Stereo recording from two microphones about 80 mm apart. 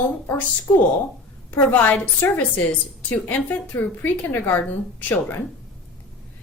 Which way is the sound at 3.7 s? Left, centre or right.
Left.